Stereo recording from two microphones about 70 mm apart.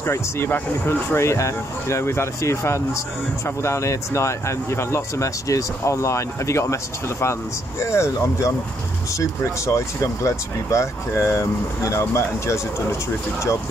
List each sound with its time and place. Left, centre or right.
0.0 s speech: left